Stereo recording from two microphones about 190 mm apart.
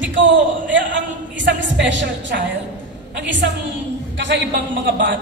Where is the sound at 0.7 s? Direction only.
70° right (ahead or behind).